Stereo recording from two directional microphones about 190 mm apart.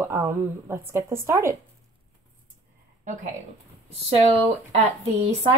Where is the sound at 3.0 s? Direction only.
40° right (ahead or behind).